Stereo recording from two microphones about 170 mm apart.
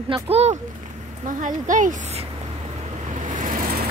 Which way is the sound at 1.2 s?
50° right (ahead or behind).